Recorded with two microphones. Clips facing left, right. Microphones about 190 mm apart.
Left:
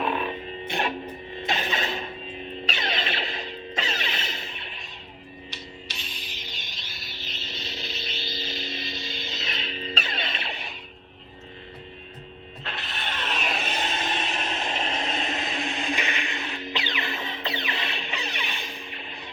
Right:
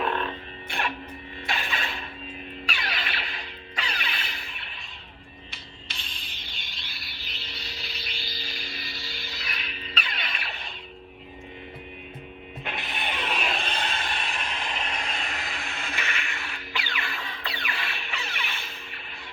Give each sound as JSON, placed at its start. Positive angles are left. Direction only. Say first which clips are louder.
{"t": 0.0, "sound": "music", "louder": "left 1 dB", "side_deg": 5}
{"t": 0.3, "sound": "music", "louder": "left 5 dB", "side_deg": 20}
{"t": 6.7, "sound": "a sound", "louder": "left 2 dB", "side_deg": 20}
{"t": 12.6, "sound": "music", "louder": "right 2 dB", "side_deg": -15}
{"t": 13.2, "sound": "a sound", "louder": "left 1 dB", "side_deg": 5}
{"t": 13.7, "sound": "vehicle", "louder": "left 3 dB", "side_deg": 20}